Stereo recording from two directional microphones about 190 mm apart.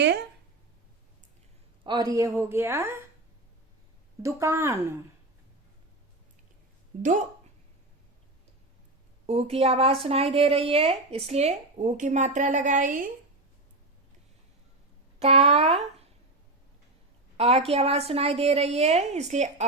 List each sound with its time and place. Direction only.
1.8 s speech: 20° right (ahead or behind)
4.2 s speech: 15° right (ahead or behind)
6.9 s speech: 45° right (ahead or behind)
9.2 s a woman's voice: 30° right (ahead or behind)
15.2 s a woman's voice: 30° right (ahead or behind)
17.3 s a woman's voice: 30° right (ahead or behind)